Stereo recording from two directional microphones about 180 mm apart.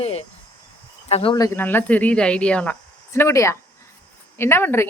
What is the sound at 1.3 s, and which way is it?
Speech, 15° left (ahead or behind).